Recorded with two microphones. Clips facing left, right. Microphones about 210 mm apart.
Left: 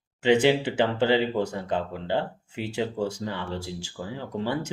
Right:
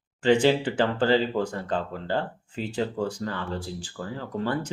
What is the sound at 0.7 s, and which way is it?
Speech, 20° left (ahead or behind).